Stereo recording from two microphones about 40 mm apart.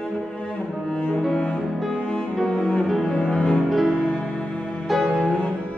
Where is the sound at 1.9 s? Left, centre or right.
Left.